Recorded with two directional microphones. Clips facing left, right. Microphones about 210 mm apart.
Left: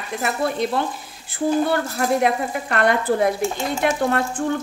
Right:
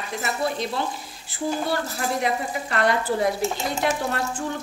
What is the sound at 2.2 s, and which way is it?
A woman's voice, 55° left (ahead or behind).